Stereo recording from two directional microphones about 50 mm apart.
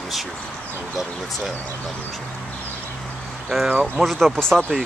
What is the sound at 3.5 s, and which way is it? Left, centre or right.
Speech, centre.